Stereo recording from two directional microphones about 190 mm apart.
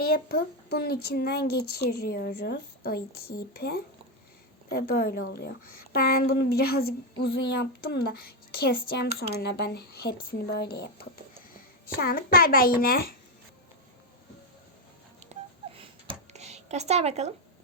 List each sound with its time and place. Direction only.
0.0 s a woman's voice: 50° left (ahead or behind)
11.9 s speech: 50° left (ahead or behind)
15.3 s telephone dialing: 30° right (ahead or behind)